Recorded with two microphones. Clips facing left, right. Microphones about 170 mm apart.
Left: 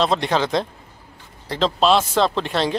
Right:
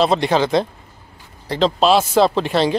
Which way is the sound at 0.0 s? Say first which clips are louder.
Right 3 dB; 5° right (ahead or behind).